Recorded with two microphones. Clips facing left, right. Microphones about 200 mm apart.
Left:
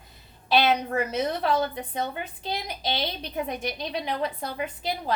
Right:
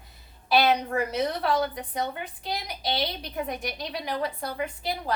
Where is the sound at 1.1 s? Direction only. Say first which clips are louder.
Left 1 dB; 25° left (ahead or behind).